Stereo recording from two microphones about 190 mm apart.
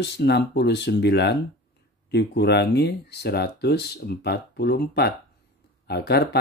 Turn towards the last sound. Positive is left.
turn(degrees=60)  # may be behind; listen again after turning